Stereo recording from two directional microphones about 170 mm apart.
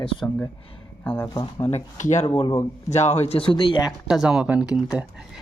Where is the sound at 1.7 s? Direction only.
40° left (ahead or behind).